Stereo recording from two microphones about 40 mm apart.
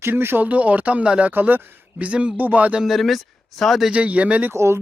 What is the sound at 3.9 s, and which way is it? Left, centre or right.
Speech, right.